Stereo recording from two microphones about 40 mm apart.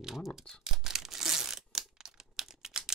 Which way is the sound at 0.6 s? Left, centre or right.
Centre.